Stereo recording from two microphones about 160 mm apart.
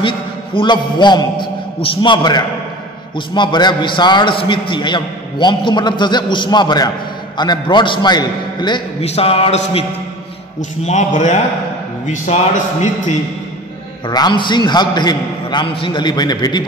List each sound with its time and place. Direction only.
0.6 s a man's voice: 30° left (ahead or behind)
9.0 s a man's voice: 40° left (ahead or behind)
14.0 s a man's voice: 30° left (ahead or behind)